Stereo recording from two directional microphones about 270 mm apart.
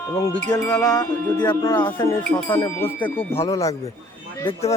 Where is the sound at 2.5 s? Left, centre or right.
Centre.